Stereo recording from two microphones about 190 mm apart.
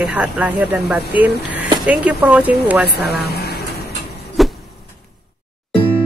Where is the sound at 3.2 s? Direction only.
55° left (ahead or behind).